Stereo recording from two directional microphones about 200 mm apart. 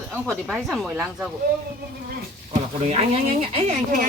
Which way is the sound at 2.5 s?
30° right (ahead or behind).